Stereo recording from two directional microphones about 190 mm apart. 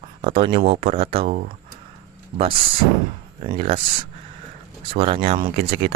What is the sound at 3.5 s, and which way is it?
Speech, 30° right (ahead or behind).